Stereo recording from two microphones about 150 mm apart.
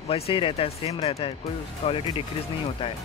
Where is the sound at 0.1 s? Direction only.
35° left (ahead or behind).